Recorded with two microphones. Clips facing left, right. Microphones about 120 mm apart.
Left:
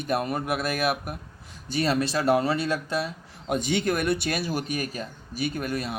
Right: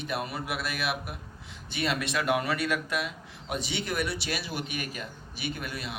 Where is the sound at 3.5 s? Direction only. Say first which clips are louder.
Left 6 dB; 50° left (ahead or behind).